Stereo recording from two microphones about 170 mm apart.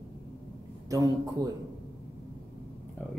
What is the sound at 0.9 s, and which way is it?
Speech, 20° right (ahead or behind).